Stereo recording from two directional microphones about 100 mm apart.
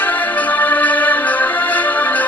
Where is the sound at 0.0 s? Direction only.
15° left (ahead or behind).